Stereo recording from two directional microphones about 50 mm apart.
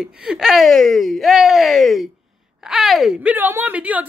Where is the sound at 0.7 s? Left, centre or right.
Centre.